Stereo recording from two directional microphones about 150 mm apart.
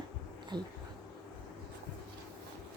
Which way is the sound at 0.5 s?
30° right (ahead or behind).